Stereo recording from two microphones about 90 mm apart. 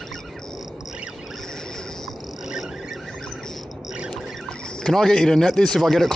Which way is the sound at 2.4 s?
5° right (ahead or behind).